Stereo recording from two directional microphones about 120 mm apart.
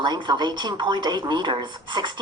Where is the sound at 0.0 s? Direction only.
40° right (ahead or behind).